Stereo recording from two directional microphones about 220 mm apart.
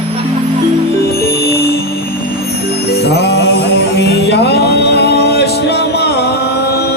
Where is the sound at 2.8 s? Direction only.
50° left (ahead or behind).